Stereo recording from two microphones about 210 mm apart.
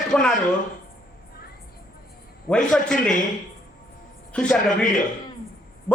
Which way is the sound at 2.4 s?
5° left (ahead or behind).